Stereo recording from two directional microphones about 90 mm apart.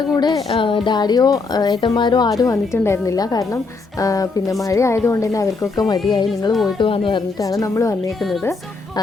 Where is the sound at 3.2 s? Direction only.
45° left (ahead or behind).